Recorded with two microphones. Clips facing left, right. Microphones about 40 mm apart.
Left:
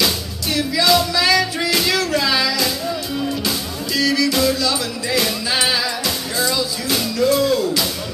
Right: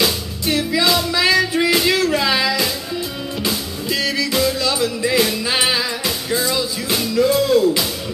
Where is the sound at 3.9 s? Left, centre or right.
Right.